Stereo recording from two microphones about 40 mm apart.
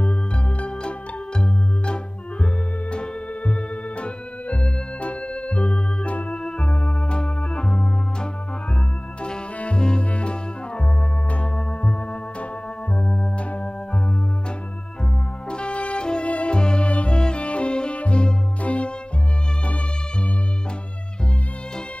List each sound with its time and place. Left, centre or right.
0.0 s music: left
2.4 s music: left
4.0 s organ: left
9.6 s music: left
13.0 s organ: centre
15.5 s music: left